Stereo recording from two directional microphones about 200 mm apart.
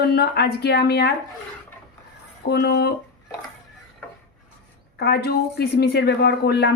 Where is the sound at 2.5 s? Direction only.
55° left (ahead or behind).